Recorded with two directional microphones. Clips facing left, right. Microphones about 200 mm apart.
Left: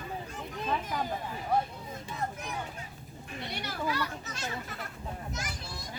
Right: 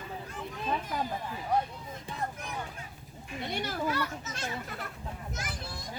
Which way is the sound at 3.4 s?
50° right (ahead or behind).